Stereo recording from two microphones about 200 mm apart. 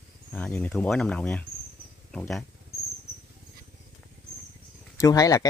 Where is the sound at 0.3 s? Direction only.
10° left (ahead or behind).